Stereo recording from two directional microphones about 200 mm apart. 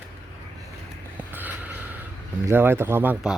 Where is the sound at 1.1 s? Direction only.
10° right (ahead or behind).